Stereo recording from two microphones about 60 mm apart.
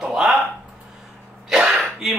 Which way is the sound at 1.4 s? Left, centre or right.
Centre.